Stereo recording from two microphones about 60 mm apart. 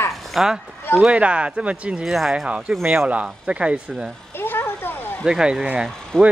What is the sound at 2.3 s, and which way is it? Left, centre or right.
Speech, centre.